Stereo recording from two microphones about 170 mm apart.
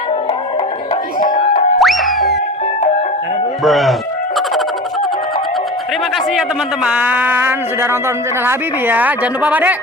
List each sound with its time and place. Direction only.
1.2 s music: 45° left (ahead or behind)
1.8 s music: centre (ahead or behind)
3.6 s speech: centre (ahead or behind)
6.8 s a woman's voice: 10° right (ahead or behind)